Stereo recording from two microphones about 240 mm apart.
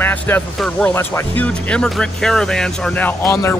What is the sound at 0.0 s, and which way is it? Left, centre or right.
Speech, centre.